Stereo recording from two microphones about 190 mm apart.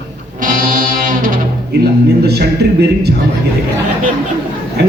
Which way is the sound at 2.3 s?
60° right (ahead or behind).